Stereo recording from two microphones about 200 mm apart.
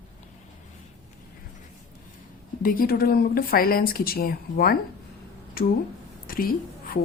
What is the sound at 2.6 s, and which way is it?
Speech, 45° left (ahead or behind).